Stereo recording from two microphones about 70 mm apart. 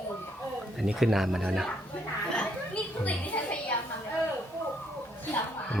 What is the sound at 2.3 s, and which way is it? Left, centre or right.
Chatter, centre.